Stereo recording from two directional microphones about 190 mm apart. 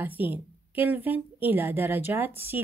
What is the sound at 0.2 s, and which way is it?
A woman's voice, 10° right (ahead or behind).